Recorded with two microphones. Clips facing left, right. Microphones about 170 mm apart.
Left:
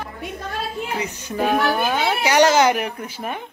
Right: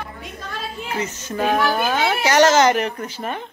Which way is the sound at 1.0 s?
15° left (ahead or behind).